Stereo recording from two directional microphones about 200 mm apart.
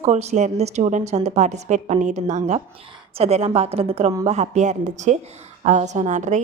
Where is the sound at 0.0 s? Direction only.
35° right (ahead or behind).